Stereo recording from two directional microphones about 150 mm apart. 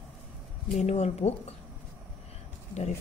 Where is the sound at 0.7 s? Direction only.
45° left (ahead or behind).